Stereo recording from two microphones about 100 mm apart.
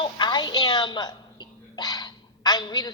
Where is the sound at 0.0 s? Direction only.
50° left (ahead or behind).